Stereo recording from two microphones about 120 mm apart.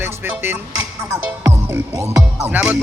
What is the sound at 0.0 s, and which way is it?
Music, 20° right (ahead or behind).